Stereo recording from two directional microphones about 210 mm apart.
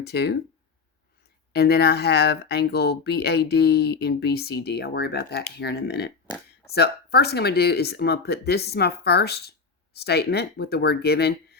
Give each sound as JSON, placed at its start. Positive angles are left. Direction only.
{"t": 0.0, "sound": "speech", "side_deg": 50}
{"t": 1.5, "sound": "speech", "side_deg": 50}